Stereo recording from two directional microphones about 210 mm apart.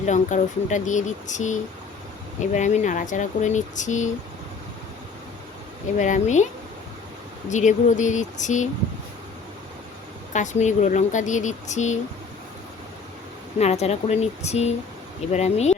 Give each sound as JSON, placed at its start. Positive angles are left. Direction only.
{"t": 0.0, "sound": "speech", "side_deg": 35}
{"t": 6.0, "sound": "speech", "side_deg": 35}
{"t": 7.5, "sound": "speech", "side_deg": 35}
{"t": 10.3, "sound": "speech", "side_deg": 35}
{"t": 13.6, "sound": "speech", "side_deg": 30}